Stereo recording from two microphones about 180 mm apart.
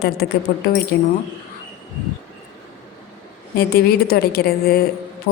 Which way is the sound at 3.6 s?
60° left (ahead or behind).